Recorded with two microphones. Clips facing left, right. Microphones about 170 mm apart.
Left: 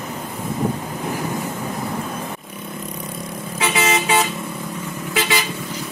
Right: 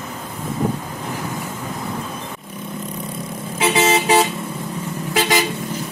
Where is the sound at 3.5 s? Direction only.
30° right (ahead or behind).